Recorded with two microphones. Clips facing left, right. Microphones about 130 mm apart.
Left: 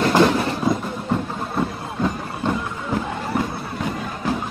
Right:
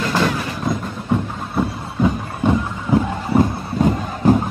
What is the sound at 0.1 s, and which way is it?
Train, 20° left (ahead or behind).